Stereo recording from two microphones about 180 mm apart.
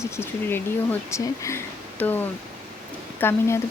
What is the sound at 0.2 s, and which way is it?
Speech, 10° left (ahead or behind).